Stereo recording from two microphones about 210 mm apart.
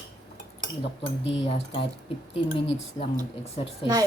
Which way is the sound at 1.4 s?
25° left (ahead or behind).